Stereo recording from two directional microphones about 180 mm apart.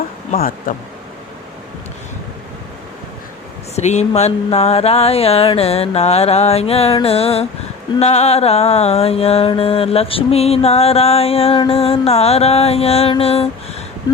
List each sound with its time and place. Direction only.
0.3 s speech: 55° left (ahead or behind)
3.8 s mantra: 40° left (ahead or behind)